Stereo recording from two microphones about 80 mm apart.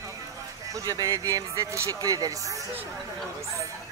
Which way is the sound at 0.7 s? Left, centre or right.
Right.